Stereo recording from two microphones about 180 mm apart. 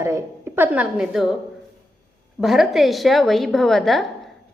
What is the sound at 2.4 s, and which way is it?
A woman's voice, centre (ahead or behind).